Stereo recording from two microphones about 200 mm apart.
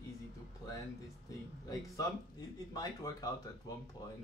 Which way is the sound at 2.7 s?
20° left (ahead or behind).